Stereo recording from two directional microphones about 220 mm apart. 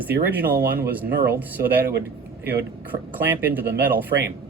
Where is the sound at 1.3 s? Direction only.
10° right (ahead or behind).